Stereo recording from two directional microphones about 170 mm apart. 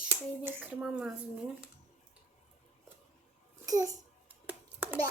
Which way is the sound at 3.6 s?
20° right (ahead or behind).